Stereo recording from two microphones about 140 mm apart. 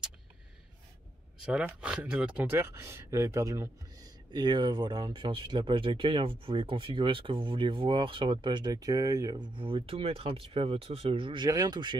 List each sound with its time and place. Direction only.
1.4 s speech: 5° right (ahead or behind); by 12.0 s 30° right (ahead or behind)